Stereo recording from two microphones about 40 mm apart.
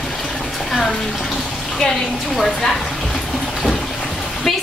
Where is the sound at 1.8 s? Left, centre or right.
Centre.